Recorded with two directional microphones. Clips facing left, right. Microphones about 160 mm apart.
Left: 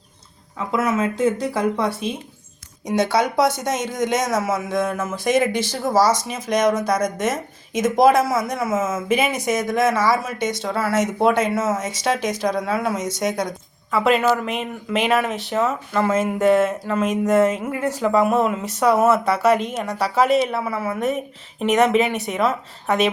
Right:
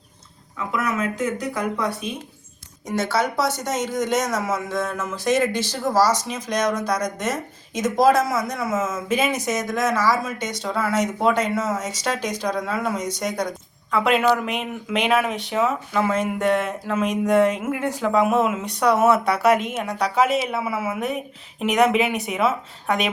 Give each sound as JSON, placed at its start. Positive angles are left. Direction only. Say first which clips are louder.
{"t": 0.7, "sound": "speech", "louder": "left 4 dB", "side_deg": 25}
{"t": 3.6, "sound": "speech", "louder": "left 1 dB", "side_deg": 10}